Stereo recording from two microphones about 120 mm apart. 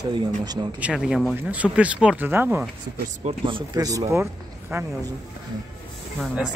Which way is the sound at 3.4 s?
45° right (ahead or behind).